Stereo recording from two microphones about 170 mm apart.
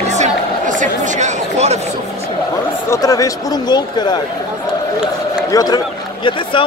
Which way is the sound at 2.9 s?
20° left (ahead or behind).